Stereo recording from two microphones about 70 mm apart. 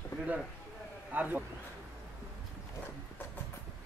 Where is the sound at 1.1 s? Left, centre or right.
Right.